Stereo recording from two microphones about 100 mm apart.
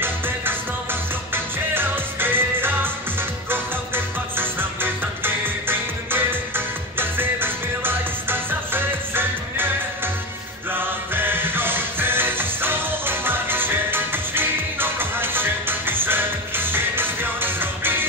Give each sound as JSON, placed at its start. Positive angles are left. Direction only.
{"t": 1.3, "sound": "music", "side_deg": -20}
{"t": 10.7, "sound": "music", "side_deg": -20}